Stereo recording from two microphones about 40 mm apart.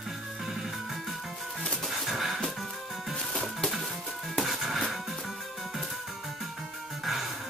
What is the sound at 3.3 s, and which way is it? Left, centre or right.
Music, centre.